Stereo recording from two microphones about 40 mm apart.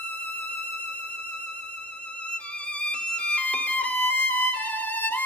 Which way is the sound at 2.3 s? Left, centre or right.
Left.